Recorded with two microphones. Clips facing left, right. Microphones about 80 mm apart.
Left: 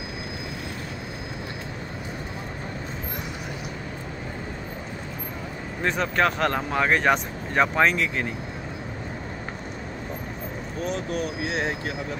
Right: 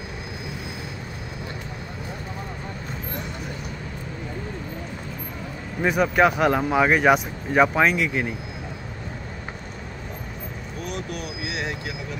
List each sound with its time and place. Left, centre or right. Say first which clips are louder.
5.8 s speech: right 4 dB; centre
10.9 s vehicle: left 4 dB; left